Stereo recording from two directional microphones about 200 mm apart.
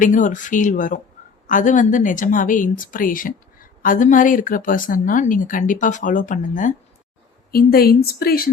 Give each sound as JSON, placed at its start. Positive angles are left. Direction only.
{"t": 0.0, "sound": "speech", "side_deg": 40}